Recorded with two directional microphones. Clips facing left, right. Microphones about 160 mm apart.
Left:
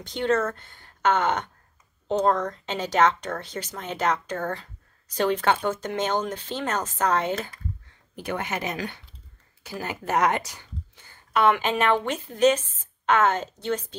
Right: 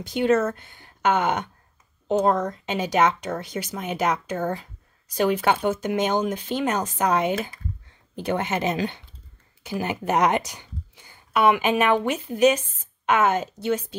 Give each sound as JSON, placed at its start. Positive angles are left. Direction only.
{"t": 0.0, "sound": "speech", "side_deg": -10}
{"t": 8.2, "sound": "speech", "side_deg": -25}